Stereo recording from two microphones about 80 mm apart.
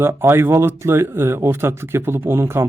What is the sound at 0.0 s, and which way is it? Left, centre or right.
Speech, right.